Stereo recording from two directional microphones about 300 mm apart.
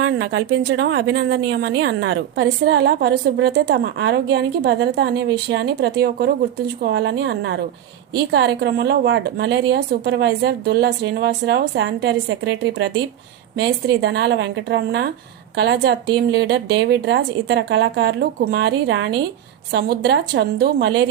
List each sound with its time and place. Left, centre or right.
0.0 s a woman's voice: right